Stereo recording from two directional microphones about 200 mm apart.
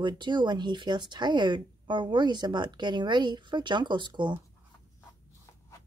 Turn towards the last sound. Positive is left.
turn(degrees=-25)  # may be behind; listen again after turning